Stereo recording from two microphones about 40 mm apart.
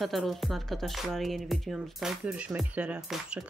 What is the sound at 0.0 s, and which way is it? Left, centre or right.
Speech, centre.